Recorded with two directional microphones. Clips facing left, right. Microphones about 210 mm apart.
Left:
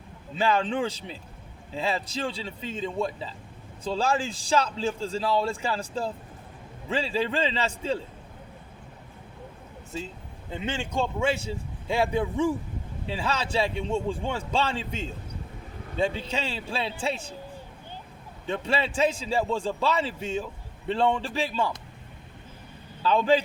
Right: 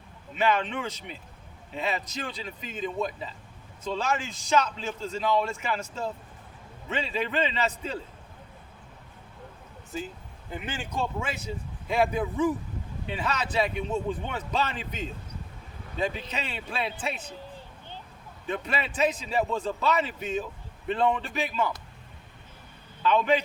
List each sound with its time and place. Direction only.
0.3 s a man's voice: 30° left (ahead or behind)
10.5 s a man's voice: 25° left (ahead or behind)
18.4 s a man's voice: 30° left (ahead or behind)
23.0 s a man's voice: 30° left (ahead or behind)